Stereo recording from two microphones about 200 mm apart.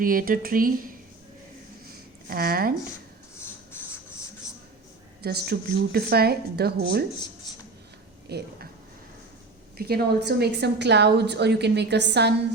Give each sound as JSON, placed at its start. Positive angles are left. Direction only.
{"t": 0.0, "sound": "speech", "side_deg": -45}
{"t": 2.3, "sound": "speech", "side_deg": -50}
{"t": 3.4, "sound": "writing", "side_deg": 10}
{"t": 4.4, "sound": "a sound", "side_deg": 15}
{"t": 5.2, "sound": "speech", "side_deg": -50}
{"t": 8.3, "sound": "speech", "side_deg": -55}
{"t": 9.7, "sound": "a woman's voice", "side_deg": -50}